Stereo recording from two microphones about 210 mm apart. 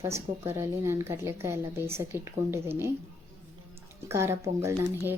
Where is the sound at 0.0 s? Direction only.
10° right (ahead or behind).